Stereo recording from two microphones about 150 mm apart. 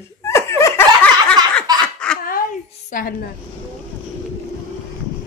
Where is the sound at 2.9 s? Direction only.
70° left (ahead or behind).